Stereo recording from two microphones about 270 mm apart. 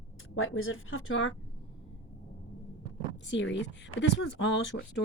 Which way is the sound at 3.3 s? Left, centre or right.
Left.